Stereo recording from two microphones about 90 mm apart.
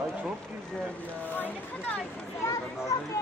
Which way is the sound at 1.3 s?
20° left (ahead or behind).